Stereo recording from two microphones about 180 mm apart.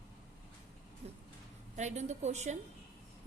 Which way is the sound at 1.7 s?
40° right (ahead or behind).